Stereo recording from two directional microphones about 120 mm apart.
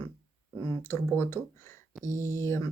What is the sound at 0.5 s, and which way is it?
Speech, 20° left (ahead or behind).